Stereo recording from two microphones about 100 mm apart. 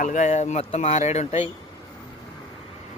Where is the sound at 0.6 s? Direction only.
85° left.